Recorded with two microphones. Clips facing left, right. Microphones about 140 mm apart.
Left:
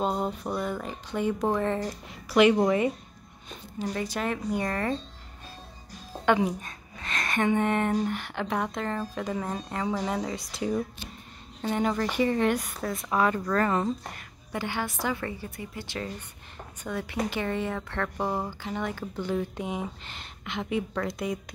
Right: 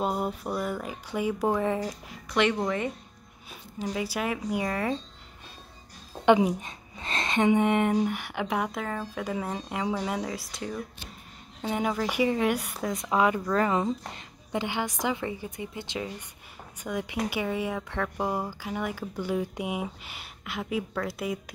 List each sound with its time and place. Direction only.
0.0 s speech: 5° right (ahead or behind)
1.9 s a woman's voice: 5° left (ahead or behind)
3.4 s speech: 10° right (ahead or behind)
6.2 s a sound: 20° right (ahead or behind)
7.1 s speech: 25° right (ahead or behind); by 10.6 s centre (ahead or behind)
11.6 s speech: 10° right (ahead or behind)